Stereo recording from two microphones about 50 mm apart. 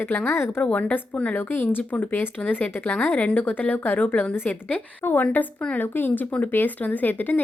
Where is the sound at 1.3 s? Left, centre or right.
Left.